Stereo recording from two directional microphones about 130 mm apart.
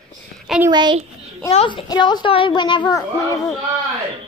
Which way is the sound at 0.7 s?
35° right (ahead or behind).